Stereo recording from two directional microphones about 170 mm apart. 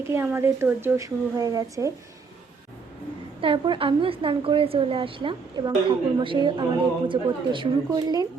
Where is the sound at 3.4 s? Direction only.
30° right (ahead or behind).